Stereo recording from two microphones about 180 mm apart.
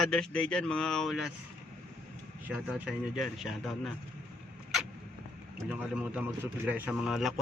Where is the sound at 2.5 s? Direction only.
5° right (ahead or behind).